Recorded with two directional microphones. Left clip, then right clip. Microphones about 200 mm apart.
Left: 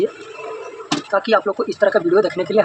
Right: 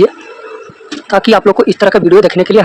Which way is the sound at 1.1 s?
55° right (ahead or behind).